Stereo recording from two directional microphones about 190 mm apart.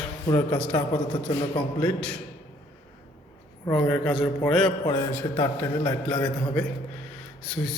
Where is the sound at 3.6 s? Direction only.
5° left (ahead or behind).